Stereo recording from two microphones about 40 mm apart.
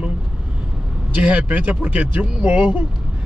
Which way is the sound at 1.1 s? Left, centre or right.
Right.